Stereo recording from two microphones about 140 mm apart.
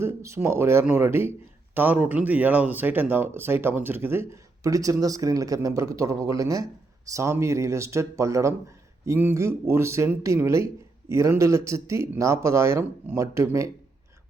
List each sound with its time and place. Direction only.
0.0 s speech: 20° right (ahead or behind)